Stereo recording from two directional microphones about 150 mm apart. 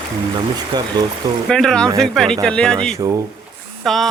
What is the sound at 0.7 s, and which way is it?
Speech, 25° right (ahead or behind).